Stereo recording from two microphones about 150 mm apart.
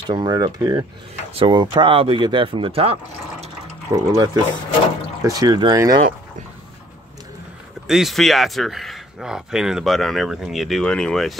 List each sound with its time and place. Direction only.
0.0 s speech: 30° right (ahead or behind)
3.9 s speech: 25° right (ahead or behind)
7.8 s speech: 5° right (ahead or behind)